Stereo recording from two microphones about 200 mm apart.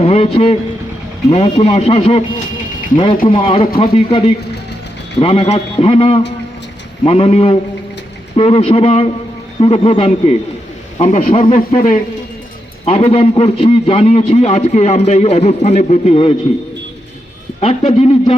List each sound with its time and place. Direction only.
0.0 s a man's voice: 30° left (ahead or behind)
3.2 s a man's voice: 25° left (ahead or behind)
17.6 s a man's voice: 30° left (ahead or behind)